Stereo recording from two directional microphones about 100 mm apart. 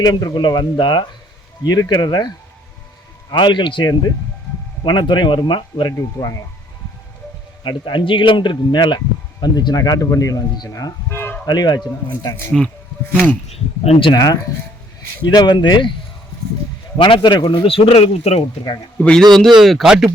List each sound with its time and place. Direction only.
0.0 s speech: 40° left (ahead or behind)
6.1 s speech: 35° left (ahead or behind)
7.6 s speech: 50° left (ahead or behind)
11.1 s a sound: 20° left (ahead or behind)
11.4 s speech: 45° left (ahead or behind)
12.5 s speech: 5° left (ahead or behind)
13.5 s speech: 90° left
14.1 s speech: 40° left (ahead or behind)
17.0 s a man's voice: 50° left (ahead or behind); by 18.4 s 85° left
18.9 s a man's voice: 10° left (ahead or behind)
19.5 s speech: centre (ahead or behind)